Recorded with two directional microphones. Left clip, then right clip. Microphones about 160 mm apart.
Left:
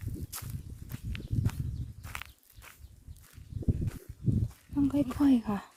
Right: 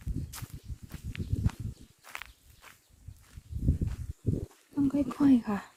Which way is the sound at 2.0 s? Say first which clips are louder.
Even; 90° left.